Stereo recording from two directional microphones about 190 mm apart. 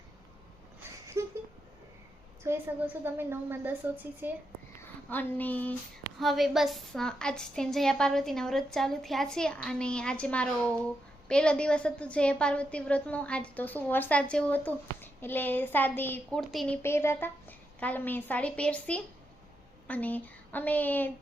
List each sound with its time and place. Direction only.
1.2 s a sound: 15° right (ahead or behind)
2.4 s a woman's voice: 10° right (ahead or behind)
4.8 s a woman's voice: 10° left (ahead or behind)